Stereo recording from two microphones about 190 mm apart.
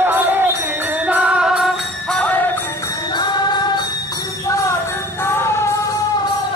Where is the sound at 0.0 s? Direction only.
10° right (ahead or behind); by 2.6 s 10° left (ahead or behind).